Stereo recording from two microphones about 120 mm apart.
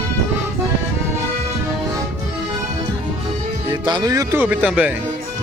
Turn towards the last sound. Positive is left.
turn(degrees=-10)  # may be behind; listen again after turning